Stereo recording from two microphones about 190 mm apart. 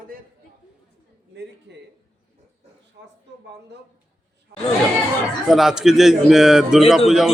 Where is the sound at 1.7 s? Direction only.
60° right (ahead or behind).